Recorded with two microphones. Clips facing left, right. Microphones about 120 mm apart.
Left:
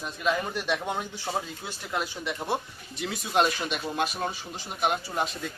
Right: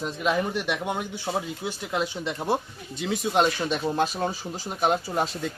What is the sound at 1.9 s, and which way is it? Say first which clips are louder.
Speech: right 2 dB; 20° right (ahead or behind).